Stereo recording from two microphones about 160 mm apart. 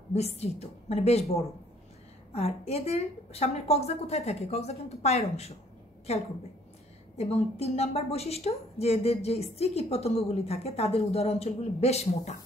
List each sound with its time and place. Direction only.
0.1 s a woman's voice: 40° left (ahead or behind)